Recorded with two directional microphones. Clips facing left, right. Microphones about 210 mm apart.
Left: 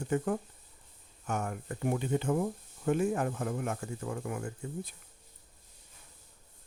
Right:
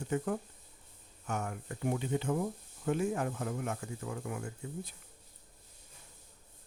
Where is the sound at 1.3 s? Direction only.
50° left (ahead or behind).